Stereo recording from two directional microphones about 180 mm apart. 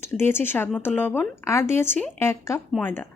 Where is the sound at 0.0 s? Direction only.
15° left (ahead or behind).